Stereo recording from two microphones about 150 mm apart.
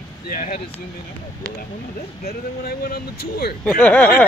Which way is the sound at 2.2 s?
90° left.